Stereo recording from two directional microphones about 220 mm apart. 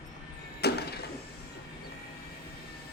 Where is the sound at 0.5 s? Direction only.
45° left (ahead or behind).